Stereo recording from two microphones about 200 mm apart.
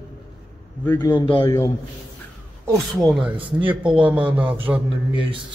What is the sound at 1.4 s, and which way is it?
Speech, 15° left (ahead or behind).